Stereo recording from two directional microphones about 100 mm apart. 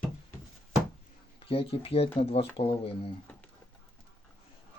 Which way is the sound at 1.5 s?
75° left (ahead or behind).